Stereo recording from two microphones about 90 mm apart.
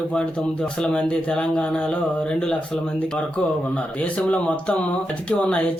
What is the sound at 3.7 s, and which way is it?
Speech, 15° left (ahead or behind).